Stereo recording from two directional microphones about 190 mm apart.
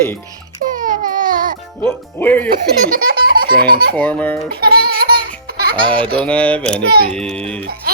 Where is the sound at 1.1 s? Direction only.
45° right (ahead or behind).